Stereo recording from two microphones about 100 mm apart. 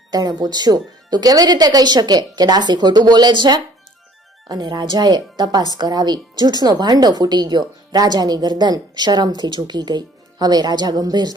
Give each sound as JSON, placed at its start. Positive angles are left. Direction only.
{"t": 0.1, "sound": "speech", "side_deg": -40}